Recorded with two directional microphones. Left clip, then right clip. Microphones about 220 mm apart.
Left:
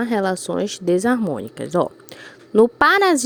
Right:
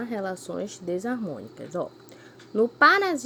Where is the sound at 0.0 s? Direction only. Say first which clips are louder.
Left 10 dB; 45° left (ahead or behind).